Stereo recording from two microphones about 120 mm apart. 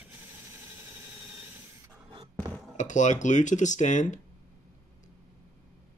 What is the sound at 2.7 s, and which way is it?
Speech, 90° left.